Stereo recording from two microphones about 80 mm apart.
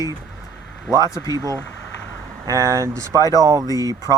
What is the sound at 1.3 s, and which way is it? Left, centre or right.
Speech, right.